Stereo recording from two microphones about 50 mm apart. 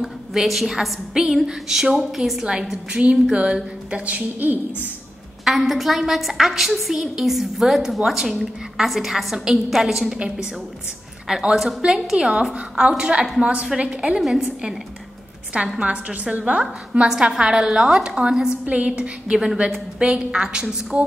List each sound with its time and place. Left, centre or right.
0.0 s a woman's voice: centre
2.9 s a woman's voice: right
5.4 s a woman's voice: centre
11.2 s a woman's voice: centre
14.2 s a woman's voice: centre
15.8 s a woman's voice: right
17.4 s a woman's voice: centre
18.7 s a woman's voice: right
20.9 s a woman's voice: right